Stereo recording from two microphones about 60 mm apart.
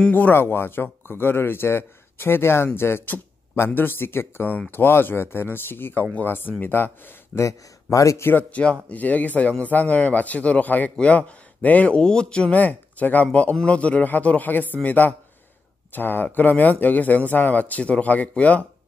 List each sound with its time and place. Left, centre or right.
0.1 s speech: left
7.3 s a man's voice: left
8.2 s speech: left
8.5 s speech: left